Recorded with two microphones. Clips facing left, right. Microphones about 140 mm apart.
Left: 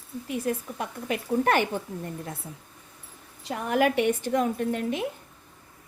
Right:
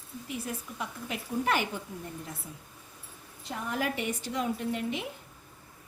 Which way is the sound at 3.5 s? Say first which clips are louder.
Left 9 dB; 70° left (ahead or behind).